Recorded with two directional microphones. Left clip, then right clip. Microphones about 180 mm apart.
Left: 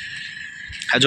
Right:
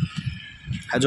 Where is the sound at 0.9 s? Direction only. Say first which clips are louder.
Left 7 dB; 15° right (ahead or behind).